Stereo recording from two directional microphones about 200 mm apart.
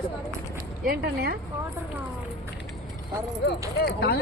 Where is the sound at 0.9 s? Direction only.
50° right (ahead or behind).